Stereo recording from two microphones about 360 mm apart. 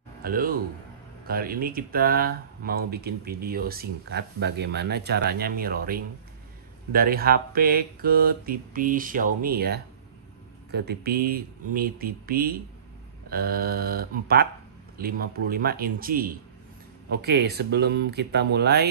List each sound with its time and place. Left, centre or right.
0.2 s a man's voice: right